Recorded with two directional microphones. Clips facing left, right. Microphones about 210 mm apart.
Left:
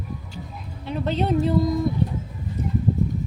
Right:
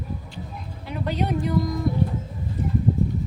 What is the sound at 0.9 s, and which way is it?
Speech, 25° left (ahead or behind).